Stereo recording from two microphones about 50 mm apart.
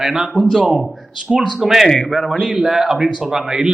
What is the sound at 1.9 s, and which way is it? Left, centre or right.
Speech, centre.